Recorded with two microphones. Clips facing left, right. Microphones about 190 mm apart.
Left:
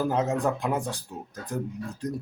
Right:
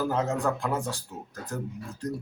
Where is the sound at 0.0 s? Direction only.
20° left (ahead or behind).